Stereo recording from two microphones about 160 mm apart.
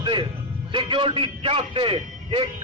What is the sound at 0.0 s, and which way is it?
Music, 30° right (ahead or behind).